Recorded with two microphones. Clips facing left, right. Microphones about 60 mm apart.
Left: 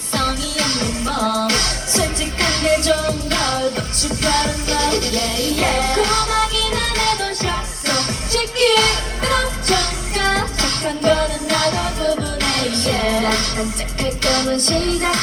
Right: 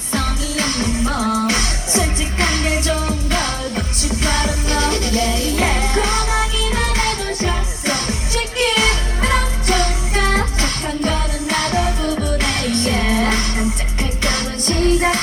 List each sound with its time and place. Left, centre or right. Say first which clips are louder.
0.1 s music: left 1 dB; right